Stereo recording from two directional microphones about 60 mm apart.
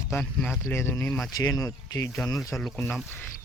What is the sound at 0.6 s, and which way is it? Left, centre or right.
Speech, left.